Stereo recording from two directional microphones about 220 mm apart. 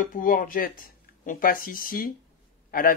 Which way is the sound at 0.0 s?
40° left (ahead or behind).